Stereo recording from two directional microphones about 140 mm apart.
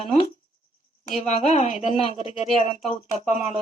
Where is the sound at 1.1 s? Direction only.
55° left (ahead or behind).